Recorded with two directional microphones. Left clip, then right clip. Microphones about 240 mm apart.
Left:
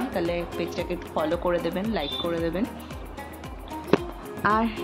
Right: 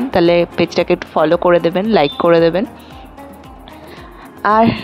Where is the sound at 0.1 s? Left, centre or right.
Right.